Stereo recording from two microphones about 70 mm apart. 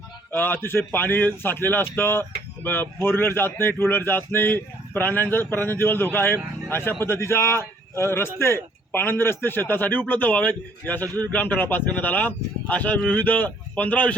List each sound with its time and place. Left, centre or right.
0.3 s speech: left